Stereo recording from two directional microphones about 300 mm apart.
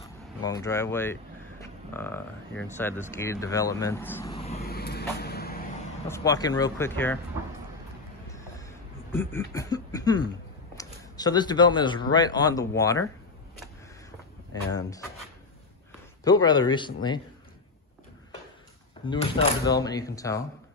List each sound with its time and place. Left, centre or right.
0.4 s speech: centre
4.3 s vehicle: centre
4.6 s vehicle: left
6.0 s speech: centre
8.3 s a sound: centre
9.1 s speech: centre
14.5 s speech: centre
16.3 s speech: centre
19.0 s speech: centre